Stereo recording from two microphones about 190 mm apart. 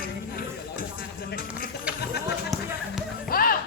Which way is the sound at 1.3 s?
50° left (ahead or behind).